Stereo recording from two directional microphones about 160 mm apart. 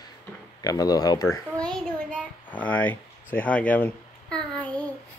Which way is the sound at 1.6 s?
5° left (ahead or behind).